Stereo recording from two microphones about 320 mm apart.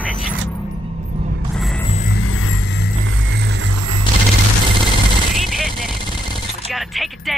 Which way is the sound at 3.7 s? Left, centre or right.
Right.